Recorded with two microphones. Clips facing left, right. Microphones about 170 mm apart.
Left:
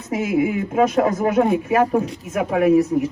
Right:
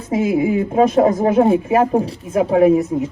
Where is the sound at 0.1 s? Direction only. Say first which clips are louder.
Right 3 dB; 25° right (ahead or behind).